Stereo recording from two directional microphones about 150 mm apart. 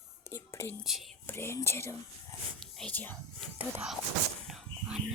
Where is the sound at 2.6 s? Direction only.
5° left (ahead or behind).